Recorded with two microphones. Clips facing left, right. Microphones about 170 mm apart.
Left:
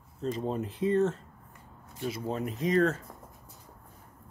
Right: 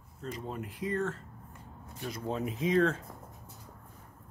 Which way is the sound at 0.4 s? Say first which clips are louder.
Left 7 dB; 25° left (ahead or behind).